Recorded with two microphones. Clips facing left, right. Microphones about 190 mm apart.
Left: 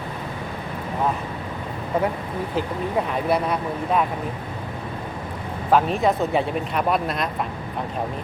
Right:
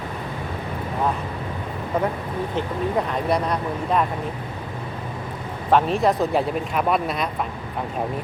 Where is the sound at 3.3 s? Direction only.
5° left (ahead or behind).